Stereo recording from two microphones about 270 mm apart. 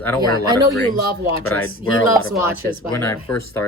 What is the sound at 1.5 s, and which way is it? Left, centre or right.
Speech, left.